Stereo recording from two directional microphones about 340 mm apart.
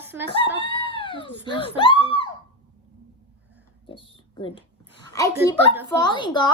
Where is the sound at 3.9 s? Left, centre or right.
Centre.